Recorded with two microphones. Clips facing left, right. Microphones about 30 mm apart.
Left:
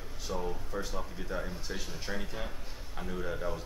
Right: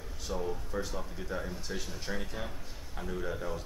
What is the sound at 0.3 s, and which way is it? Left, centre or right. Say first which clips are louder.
Speech: right 1 dB; centre.